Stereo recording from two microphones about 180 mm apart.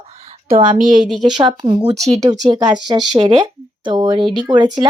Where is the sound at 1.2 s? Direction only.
25° right (ahead or behind).